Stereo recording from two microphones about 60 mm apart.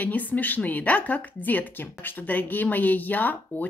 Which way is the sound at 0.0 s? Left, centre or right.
Left.